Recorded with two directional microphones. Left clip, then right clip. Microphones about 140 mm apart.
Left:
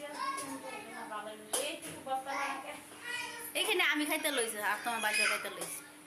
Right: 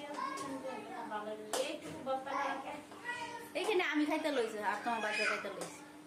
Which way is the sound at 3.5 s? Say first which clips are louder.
Left 3 dB; 10° right (ahead or behind).